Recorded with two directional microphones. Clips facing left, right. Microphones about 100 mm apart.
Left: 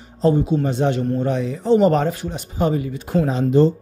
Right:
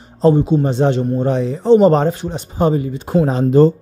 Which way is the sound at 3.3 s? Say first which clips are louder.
Right 4 dB; 45° right (ahead or behind).